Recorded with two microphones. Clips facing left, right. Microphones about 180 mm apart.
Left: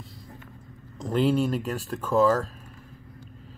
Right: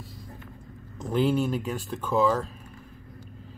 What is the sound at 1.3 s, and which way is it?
Speech, centre (ahead or behind).